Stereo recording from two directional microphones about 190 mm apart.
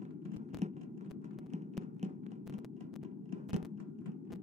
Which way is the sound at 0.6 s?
35° right (ahead or behind).